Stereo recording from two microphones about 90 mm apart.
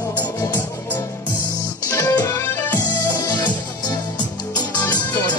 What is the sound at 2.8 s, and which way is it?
Music, 50° left (ahead or behind).